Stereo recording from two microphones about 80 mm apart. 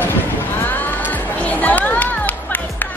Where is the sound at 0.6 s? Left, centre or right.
Left.